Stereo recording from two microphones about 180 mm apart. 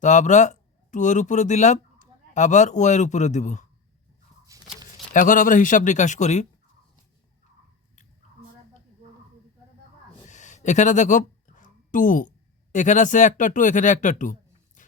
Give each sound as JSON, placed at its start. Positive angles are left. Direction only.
{"t": 0.0, "sound": "speech", "side_deg": 40}
{"t": 4.5, "sound": "a sound", "side_deg": -20}
{"t": 5.1, "sound": "speech", "side_deg": 50}
{"t": 10.2, "sound": "a sound", "side_deg": 40}
{"t": 12.7, "sound": "speech", "side_deg": 45}
{"t": 14.8, "sound": "music", "side_deg": 45}